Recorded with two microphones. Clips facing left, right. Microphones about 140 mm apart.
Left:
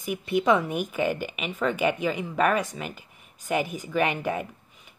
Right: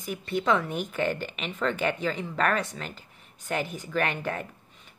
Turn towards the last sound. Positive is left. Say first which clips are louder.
# left 2 dB
turn(degrees=10)  # may be behind; listen again after turning